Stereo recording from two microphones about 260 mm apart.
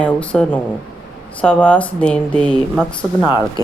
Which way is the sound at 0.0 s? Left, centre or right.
Centre.